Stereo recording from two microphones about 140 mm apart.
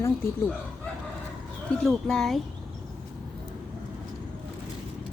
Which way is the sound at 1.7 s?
Centre (ahead or behind).